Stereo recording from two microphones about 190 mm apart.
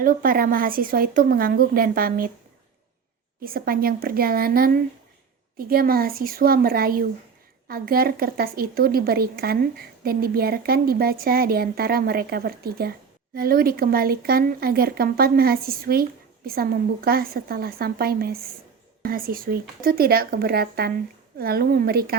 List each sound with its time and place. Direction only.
0.0 s speech: 45° right (ahead or behind)
3.4 s speech: 50° right (ahead or behind)